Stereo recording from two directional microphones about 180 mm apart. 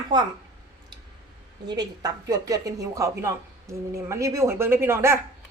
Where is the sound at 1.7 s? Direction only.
20° right (ahead or behind).